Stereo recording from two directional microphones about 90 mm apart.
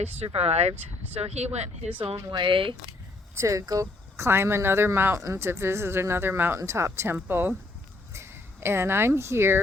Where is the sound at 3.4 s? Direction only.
35° right (ahead or behind).